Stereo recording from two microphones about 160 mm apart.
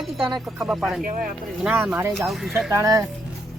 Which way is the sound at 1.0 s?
55° right (ahead or behind).